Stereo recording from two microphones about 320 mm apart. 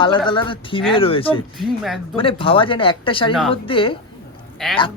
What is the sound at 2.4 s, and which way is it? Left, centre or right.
A woman's voice, centre.